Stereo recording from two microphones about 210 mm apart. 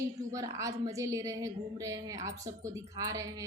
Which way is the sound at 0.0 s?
15° right (ahead or behind).